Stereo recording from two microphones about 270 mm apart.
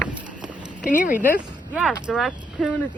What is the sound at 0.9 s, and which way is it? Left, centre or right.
Speech, left.